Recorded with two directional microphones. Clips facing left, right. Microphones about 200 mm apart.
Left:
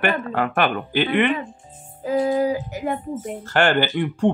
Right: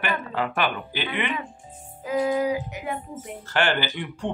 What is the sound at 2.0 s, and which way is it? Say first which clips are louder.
A woman's voice: left 3 dB; 35° left (ahead or behind).